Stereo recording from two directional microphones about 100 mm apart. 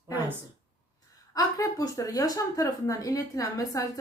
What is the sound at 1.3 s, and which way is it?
A woman's voice, 35° left (ahead or behind).